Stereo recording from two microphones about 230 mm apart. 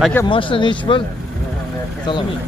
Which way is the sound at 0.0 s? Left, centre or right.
Centre.